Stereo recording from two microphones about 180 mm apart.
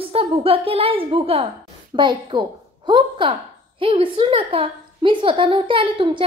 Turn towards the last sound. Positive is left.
turn(degrees=-25)  # may be behind; listen again after turning